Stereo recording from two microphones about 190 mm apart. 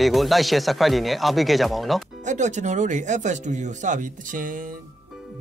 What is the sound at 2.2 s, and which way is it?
Speech, 40° right (ahead or behind).